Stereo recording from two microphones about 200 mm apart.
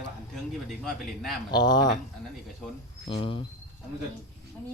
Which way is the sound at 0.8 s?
Centre (ahead or behind).